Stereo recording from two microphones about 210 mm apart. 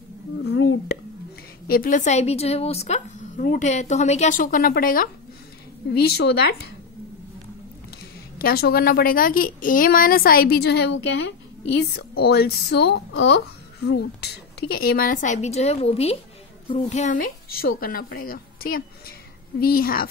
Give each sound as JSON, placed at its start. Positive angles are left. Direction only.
{"t": 0.4, "sound": "a sound", "side_deg": 55}
{"t": 1.7, "sound": "a woman's voice", "side_deg": 40}
{"t": 8.4, "sound": "a woman's voice", "side_deg": 45}